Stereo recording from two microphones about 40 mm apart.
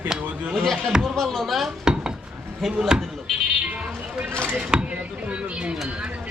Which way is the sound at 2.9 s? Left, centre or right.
Centre.